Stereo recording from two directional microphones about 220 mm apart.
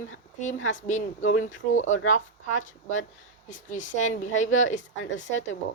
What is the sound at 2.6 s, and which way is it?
A woman's voice, 35° left (ahead or behind).